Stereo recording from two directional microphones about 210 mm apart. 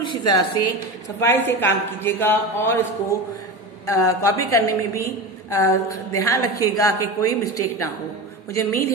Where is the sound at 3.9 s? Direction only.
15° left (ahead or behind).